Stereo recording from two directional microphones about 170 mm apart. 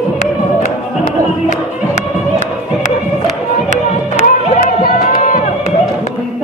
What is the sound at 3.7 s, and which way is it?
Music, 45° left (ahead or behind).